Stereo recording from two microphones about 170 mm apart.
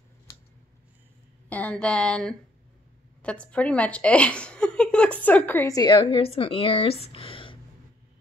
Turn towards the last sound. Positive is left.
turn(degrees=30)  # may be behind; listen again after turning